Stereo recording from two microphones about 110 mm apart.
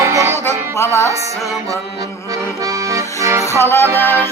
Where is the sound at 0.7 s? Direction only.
25° left (ahead or behind).